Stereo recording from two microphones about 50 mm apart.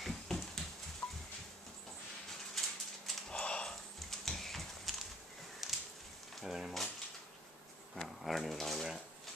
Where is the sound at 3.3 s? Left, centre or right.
Centre.